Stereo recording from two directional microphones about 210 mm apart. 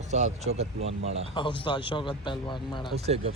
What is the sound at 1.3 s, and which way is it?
Speech, 25° left (ahead or behind).